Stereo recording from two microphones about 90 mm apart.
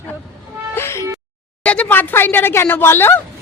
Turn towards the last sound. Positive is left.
turn(degrees=25)  # may be behind; listen again after turning